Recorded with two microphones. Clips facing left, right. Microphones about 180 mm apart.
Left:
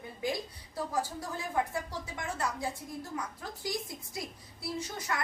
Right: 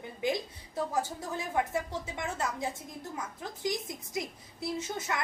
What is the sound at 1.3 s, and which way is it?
A woman's voice, 20° right (ahead or behind).